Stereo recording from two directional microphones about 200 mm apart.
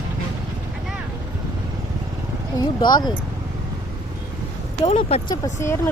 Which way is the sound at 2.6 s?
20° left (ahead or behind).